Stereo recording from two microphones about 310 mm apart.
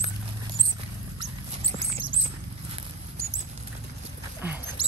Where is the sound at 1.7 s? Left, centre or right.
Centre.